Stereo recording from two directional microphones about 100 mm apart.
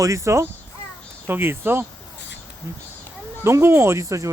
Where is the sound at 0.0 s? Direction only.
30° right (ahead or behind).